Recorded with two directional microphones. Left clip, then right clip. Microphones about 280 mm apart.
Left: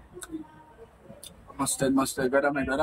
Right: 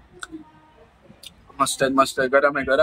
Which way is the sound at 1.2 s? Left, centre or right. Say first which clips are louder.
Right 10 dB; centre.